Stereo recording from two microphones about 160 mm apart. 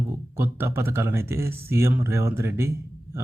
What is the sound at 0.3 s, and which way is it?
Speech, 15° right (ahead or behind).